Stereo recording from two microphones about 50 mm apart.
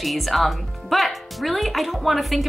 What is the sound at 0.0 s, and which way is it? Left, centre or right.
Speech, centre.